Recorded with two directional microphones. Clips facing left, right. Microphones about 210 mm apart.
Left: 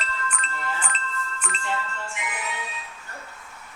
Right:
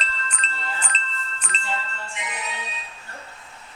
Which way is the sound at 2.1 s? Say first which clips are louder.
Right 1 dB; 20° right (ahead or behind).